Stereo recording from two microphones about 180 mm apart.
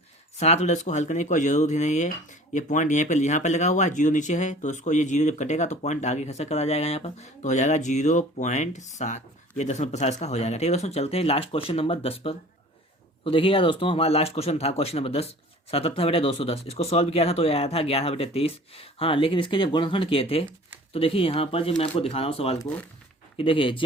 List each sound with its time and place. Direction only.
0.3 s speech: 35° left (ahead or behind)